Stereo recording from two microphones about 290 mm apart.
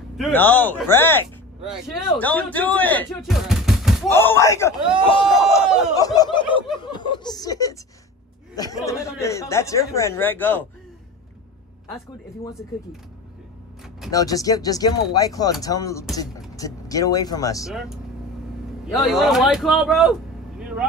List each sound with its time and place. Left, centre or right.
0.2 s a man's voice: centre
5.6 s a sound: centre
5.9 s snicker: centre
8.5 s a man's voice: centre
14.1 s a man's voice: centre
17.6 s speech: centre
19.0 s speech: centre